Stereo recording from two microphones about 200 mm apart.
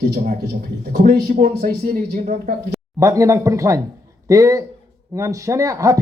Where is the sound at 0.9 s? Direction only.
50° right (ahead or behind).